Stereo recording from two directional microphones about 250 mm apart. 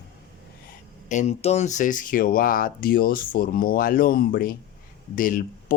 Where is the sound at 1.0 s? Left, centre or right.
Left.